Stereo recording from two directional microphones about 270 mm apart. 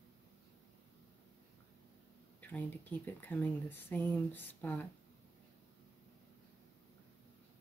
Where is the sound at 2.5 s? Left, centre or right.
Centre.